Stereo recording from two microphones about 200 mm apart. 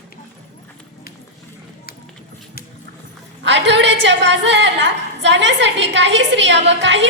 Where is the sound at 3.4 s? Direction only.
60° right (ahead or behind).